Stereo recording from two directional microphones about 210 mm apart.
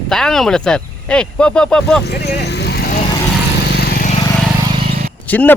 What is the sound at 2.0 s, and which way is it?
Vehicle, 50° left (ahead or behind).